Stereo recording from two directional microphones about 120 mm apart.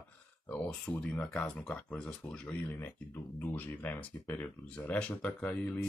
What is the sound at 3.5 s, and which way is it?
Speech, 15° left (ahead or behind).